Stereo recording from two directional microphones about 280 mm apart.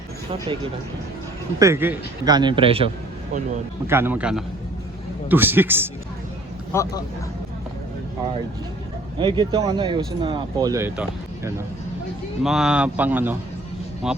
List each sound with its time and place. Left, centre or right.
1.5 s speech: centre
3.8 s speech: centre
6.7 s speech: centre
9.1 s speech: centre